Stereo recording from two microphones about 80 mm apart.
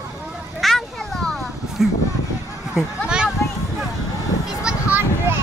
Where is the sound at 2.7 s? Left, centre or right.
Centre.